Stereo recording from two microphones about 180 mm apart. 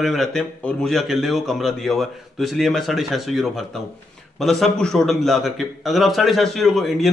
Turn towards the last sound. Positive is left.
turn(degrees=0)  # may be behind; listen again after turning